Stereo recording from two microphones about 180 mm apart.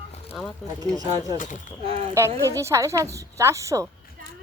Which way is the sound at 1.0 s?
20° right (ahead or behind).